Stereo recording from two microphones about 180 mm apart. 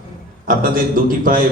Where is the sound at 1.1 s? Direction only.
50° right (ahead or behind).